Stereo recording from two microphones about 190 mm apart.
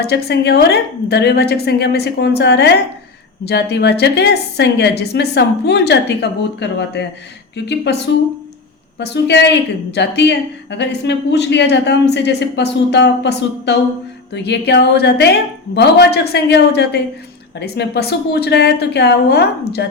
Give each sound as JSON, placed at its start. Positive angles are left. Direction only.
{"t": 0.0, "sound": "a woman's voice", "side_deg": 60}